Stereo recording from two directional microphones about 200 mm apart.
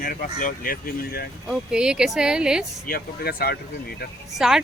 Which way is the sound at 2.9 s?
50° left (ahead or behind).